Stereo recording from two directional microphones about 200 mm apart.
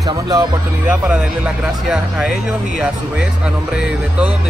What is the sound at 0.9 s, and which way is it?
Speech, 5° right (ahead or behind).